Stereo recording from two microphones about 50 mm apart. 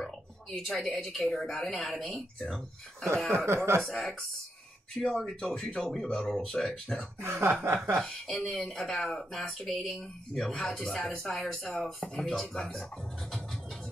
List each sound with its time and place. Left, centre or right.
0.7 s speech: centre
3.4 s speech: right
3.8 s speech: centre
5.1 s speech: centre
5.8 s speech: centre
7.2 s chuckle: right
8.0 s speech: centre
12.5 s speech: centre